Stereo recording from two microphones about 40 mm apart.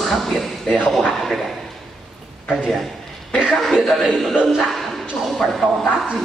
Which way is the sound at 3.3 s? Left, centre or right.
Centre.